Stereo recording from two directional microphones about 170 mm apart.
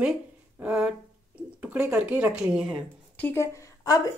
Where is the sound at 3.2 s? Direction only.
15° left (ahead or behind).